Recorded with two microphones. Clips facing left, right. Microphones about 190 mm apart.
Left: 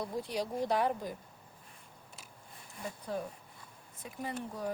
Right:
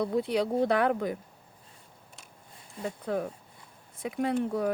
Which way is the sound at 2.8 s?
65° right (ahead or behind).